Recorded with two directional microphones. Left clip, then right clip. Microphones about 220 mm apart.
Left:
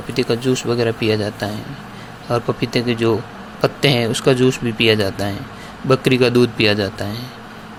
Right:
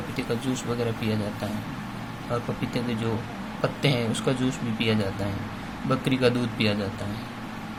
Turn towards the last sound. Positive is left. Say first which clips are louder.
# left 9 dB
turn(degrees=35)  # may be behind; listen again after turning